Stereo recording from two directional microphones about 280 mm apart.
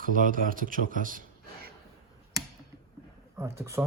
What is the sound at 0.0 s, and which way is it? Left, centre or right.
Speech, right.